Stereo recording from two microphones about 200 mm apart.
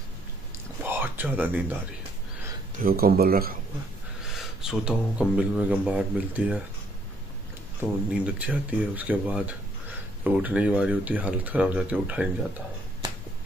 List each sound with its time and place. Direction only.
0.8 s a sound: 10° right (ahead or behind)
2.8 s speech: 50° right (ahead or behind)
4.3 s speech: 5° right (ahead or behind)
8.1 s speech: 5° right (ahead or behind)